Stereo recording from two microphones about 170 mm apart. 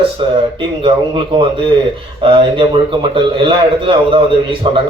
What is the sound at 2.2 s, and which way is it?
A man's voice, 30° right (ahead or behind).